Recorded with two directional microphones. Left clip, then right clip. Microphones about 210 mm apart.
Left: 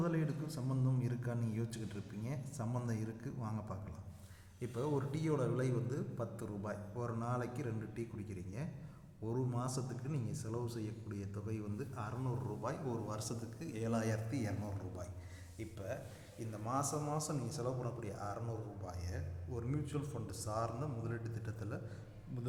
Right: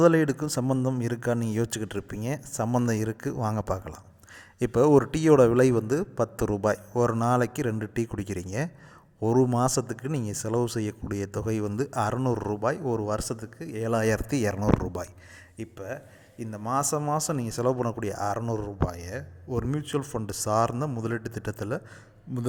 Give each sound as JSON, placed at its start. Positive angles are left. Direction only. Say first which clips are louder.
{"t": 0.0, "sound": "speech", "louder": "right 19 dB", "side_deg": -50}